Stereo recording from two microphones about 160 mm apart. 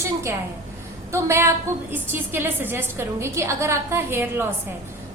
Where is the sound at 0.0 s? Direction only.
15° right (ahead or behind).